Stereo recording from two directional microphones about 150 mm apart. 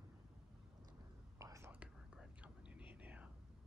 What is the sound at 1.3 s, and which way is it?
Whispering, 20° right (ahead or behind).